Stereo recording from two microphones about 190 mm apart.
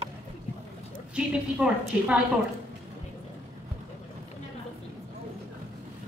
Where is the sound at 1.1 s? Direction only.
5° right (ahead or behind).